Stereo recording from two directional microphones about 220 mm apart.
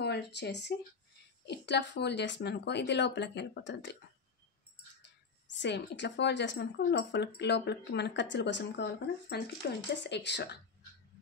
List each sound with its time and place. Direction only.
0.0 s a woman's voice: 50° left (ahead or behind)
5.5 s a woman's voice: 50° left (ahead or behind)